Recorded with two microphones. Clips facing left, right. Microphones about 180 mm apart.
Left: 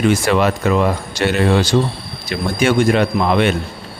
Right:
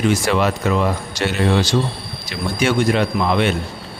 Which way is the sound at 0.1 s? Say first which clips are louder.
Left 2 dB; 55° left (ahead or behind).